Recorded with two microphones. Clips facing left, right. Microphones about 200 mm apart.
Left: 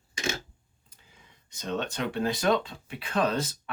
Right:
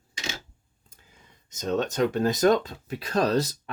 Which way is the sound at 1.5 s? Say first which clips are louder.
Right 5 dB; 45° right (ahead or behind).